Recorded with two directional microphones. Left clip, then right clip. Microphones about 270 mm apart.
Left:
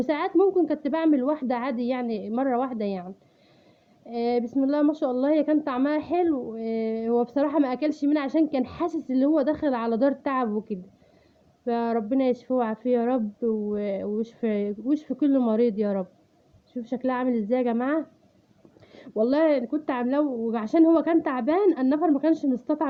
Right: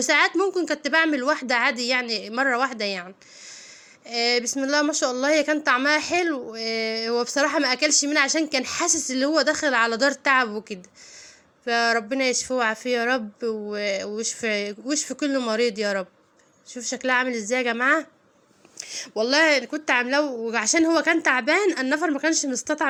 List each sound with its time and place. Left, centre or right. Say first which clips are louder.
0.0 s speech: right 3 dB; centre
4.0 s speech: right 3 dB; centre
11.6 s speech: right 5 dB; centre
13.4 s speech: left 1 dB; right
13.7 s speech: right 2 dB; centre
18.8 s a sound: right 15 dB; centre
19.3 s speech: right 4 dB; centre